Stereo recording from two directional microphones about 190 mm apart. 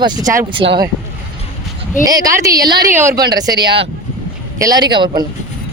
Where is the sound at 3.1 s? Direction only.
55° right (ahead or behind).